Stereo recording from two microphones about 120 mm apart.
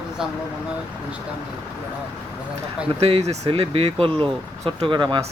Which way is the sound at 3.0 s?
65° right (ahead or behind).